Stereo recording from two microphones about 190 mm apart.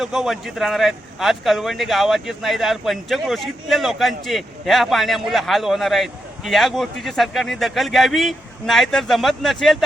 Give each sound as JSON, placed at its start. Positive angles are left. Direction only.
{"t": 0.0, "sound": "a man's voice", "side_deg": 0}